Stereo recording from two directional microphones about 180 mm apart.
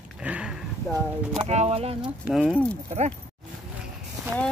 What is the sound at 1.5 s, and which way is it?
Speech, 35° right (ahead or behind).